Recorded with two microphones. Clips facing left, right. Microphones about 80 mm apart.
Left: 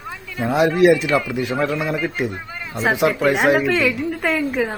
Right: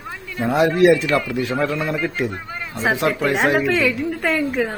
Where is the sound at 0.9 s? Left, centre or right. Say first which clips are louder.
Even; centre.